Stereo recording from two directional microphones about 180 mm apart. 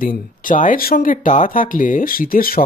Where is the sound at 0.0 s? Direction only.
50° left (ahead or behind).